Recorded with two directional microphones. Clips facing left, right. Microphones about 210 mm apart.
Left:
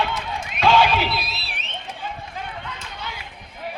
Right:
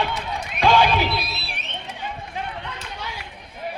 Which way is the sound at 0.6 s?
15° right (ahead or behind).